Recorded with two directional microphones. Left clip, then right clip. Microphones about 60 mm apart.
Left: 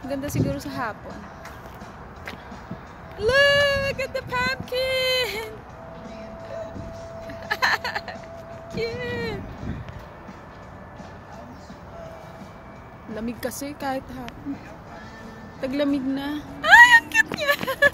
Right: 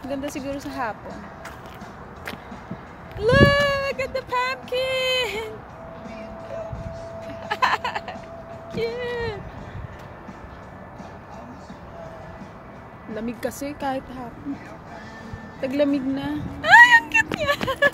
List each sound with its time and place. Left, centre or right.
0.1 s speech: left
3.2 s speech: centre
7.3 s a sound: centre
8.7 s speech: left
9.0 s a sound: left
13.2 s speech: centre
15.6 s a woman's voice: left
16.7 s a sound: left
17.6 s speech: left